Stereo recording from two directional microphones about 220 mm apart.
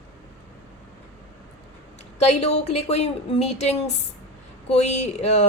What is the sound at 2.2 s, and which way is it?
A woman's voice, 30° left (ahead or behind).